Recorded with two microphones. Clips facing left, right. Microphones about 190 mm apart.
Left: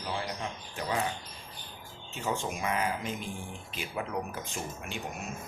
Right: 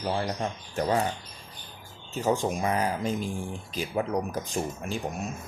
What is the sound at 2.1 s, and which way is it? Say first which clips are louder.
Speech: right 7 dB; 35° right (ahead or behind).